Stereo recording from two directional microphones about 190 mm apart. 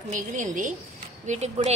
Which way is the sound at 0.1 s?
40° right (ahead or behind).